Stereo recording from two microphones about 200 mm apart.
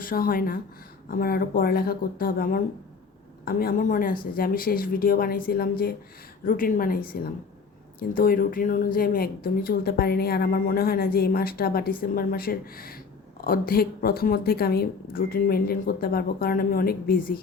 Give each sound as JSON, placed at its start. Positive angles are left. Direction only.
{"t": 0.0, "sound": "a woman's voice", "side_deg": 45}